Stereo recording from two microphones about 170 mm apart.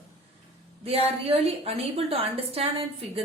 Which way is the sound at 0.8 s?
35° right (ahead or behind).